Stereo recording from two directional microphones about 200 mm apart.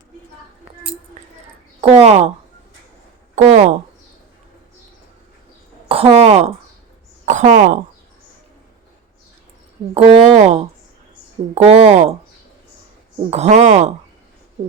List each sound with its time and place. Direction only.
1.8 s speech: 30° right (ahead or behind)
3.3 s speech: 40° right (ahead or behind)
5.9 s a woman's voice: 30° right (ahead or behind)
9.9 s speech: 30° right (ahead or behind)
13.3 s speech: 35° right (ahead or behind)